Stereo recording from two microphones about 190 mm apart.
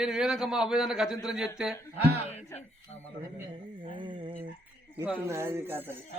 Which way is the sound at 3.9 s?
25° right (ahead or behind).